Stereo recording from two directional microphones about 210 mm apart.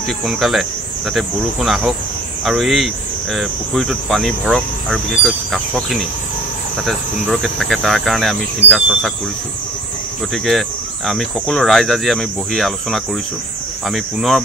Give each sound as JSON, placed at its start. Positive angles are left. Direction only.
{"t": 0.2, "sound": "speech", "side_deg": 0}
{"t": 10.3, "sound": "speech", "side_deg": 0}